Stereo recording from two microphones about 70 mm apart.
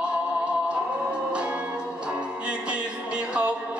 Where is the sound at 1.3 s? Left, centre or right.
Centre.